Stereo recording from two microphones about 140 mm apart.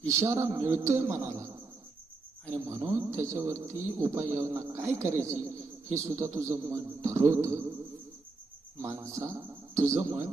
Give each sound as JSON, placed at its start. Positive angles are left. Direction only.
{"t": 0.1, "sound": "a man's voice", "side_deg": -20}
{"t": 2.5, "sound": "a man's voice", "side_deg": -20}
{"t": 8.8, "sound": "speech", "side_deg": -20}